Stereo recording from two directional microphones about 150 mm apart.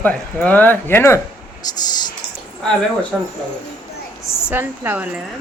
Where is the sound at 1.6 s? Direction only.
25° left (ahead or behind).